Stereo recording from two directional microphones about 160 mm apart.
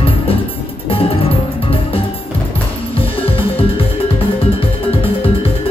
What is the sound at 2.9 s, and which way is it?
Music, 35° left (ahead or behind).